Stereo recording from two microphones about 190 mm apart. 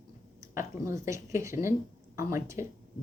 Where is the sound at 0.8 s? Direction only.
15° right (ahead or behind).